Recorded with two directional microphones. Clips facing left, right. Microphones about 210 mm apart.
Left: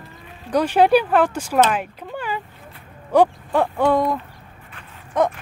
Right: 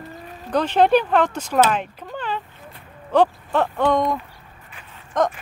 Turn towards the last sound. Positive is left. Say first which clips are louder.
# left 1 dB
turn(degrees=10)  # may be behind; listen again after turning